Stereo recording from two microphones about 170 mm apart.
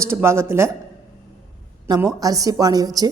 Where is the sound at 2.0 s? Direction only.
20° right (ahead or behind).